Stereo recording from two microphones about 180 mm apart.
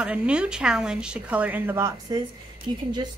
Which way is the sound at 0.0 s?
5° right (ahead or behind).